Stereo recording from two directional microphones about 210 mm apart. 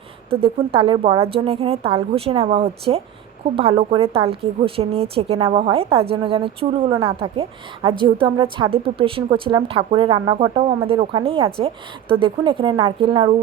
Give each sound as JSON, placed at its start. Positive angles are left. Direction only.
{"t": 0.3, "sound": "speech", "side_deg": -25}